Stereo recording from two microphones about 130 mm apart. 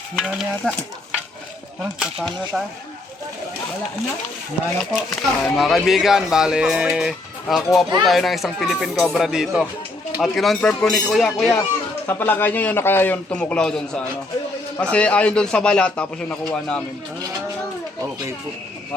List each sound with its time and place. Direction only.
0.2 s speech: 5° right (ahead or behind)
1.8 s speech: 5° right (ahead or behind)
4.8 s speech: centre (ahead or behind)
12.0 s a man's voice: 15° left (ahead or behind)